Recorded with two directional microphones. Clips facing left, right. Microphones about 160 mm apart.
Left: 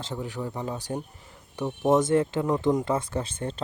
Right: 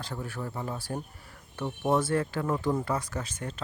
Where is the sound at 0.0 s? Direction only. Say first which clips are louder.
Left 4 dB; 20° left (ahead or behind).